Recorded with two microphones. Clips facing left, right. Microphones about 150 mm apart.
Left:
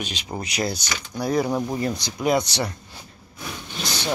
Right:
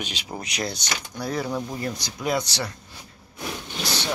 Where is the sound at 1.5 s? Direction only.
35° left (ahead or behind).